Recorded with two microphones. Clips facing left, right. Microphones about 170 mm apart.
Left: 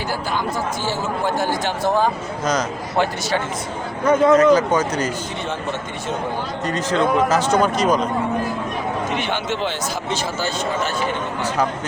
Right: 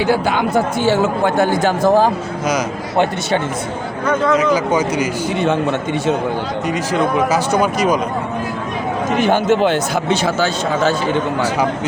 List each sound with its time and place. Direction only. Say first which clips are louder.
0.0 s speech: right 8 dB; 70° right (ahead or behind); by 2.1 s 40° right (ahead or behind)
4.4 s speech: left 1 dB; 10° right (ahead or behind)
6.7 s speech: right 1 dB; 10° right (ahead or behind)
9.1 s speech: right 9 dB; 45° right (ahead or behind); by 10.9 s 85° right